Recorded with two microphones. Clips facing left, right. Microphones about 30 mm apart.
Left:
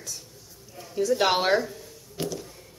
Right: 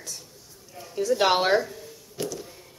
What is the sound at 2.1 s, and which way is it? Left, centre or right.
Music, centre.